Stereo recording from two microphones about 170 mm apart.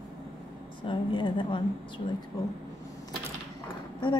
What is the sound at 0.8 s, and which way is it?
Speech, 30° left (ahead or behind).